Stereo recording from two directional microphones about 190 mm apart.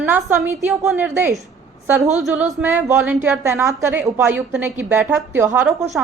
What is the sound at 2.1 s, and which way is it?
Speech, centre (ahead or behind).